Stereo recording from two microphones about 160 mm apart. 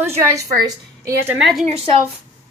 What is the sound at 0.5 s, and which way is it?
Speech, 25° right (ahead or behind).